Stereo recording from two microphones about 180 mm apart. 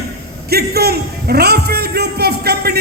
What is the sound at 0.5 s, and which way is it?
A man's voice, 60° right (ahead or behind).